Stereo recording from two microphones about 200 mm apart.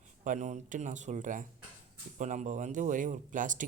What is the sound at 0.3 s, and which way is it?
Speech, 35° right (ahead or behind).